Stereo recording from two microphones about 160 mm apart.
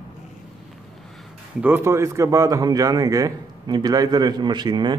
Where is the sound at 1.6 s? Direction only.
15° right (ahead or behind).